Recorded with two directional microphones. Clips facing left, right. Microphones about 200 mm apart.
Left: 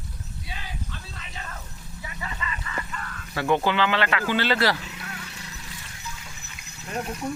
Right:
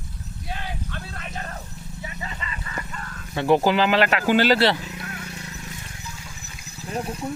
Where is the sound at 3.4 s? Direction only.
35° right (ahead or behind).